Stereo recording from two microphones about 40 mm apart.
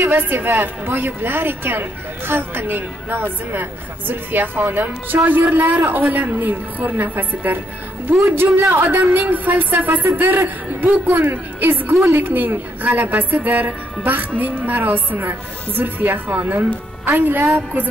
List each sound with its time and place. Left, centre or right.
0.0 s a woman's voice: right
8.1 s a woman's voice: right
8.8 s a woman's voice: right
11.9 s a woman's voice: right
12.4 s a woman's voice: right